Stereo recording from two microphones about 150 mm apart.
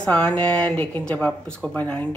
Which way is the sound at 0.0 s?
10° left (ahead or behind).